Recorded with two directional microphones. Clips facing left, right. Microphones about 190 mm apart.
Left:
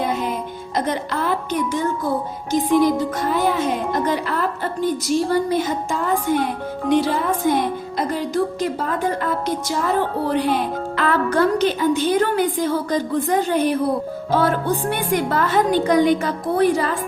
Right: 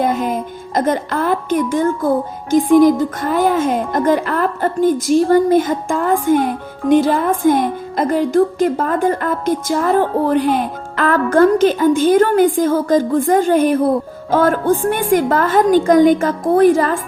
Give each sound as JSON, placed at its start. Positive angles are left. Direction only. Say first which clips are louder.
{"t": 0.0, "sound": "speech", "louder": "right 5 dB", "side_deg": -45}